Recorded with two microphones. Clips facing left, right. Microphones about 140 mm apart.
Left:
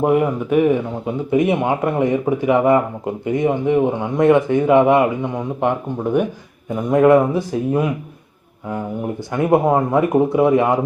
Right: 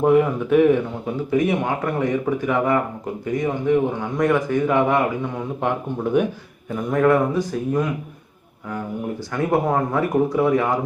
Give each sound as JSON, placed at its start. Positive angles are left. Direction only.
{"t": 0.0, "sound": "speech", "side_deg": 10}
{"t": 1.3, "sound": "a man's voice", "side_deg": 25}
{"t": 6.7, "sound": "a man's voice", "side_deg": 20}
{"t": 9.3, "sound": "a man's voice", "side_deg": 20}